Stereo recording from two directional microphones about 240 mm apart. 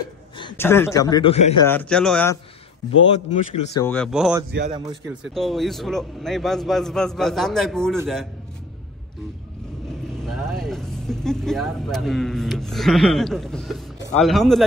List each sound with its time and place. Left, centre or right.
0.4 s speech: centre
1.6 s speech: centre
4.1 s a man's voice: centre
10.2 s speech: centre